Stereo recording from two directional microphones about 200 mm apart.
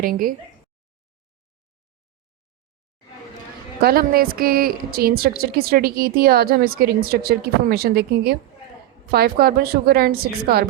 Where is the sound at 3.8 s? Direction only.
45° right (ahead or behind).